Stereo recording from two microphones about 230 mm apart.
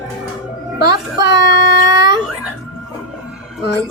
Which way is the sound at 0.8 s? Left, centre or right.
Centre.